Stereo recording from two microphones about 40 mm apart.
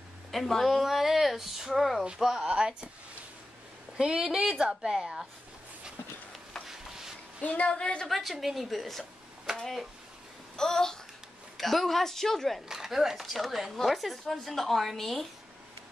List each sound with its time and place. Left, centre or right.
0.3 s speech: centre
0.8 s speech: centre
2.4 s a woman's voice: right
3.9 s a woman's voice: right
6.7 s a sound: centre
7.4 s a woman's voice: left
7.7 s a woman's voice: left
8.1 s speech: centre
10.5 s speech: centre
11.5 s speech: centre
12.6 s speech: centre